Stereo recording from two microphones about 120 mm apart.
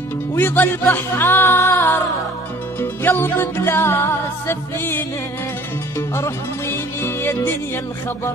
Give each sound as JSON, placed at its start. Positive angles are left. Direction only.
{"t": 0.3, "sound": "music", "side_deg": 20}